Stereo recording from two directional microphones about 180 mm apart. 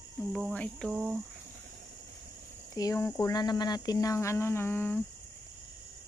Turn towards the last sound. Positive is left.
turn(degrees=10)  # may be behind; listen again after turning